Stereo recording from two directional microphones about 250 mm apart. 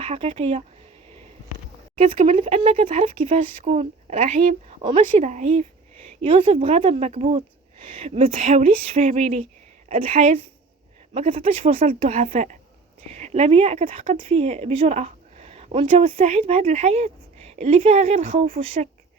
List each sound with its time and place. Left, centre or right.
0.0 s speech: right
2.0 s speech: right